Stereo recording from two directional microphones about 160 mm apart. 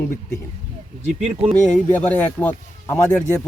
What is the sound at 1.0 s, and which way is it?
Speech, 40° right (ahead or behind).